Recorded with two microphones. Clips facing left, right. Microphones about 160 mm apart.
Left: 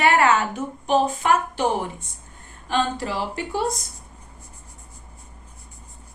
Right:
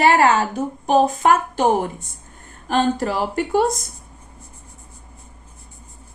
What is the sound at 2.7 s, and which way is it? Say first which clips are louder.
Speech: right 5 dB; 45° right (ahead or behind).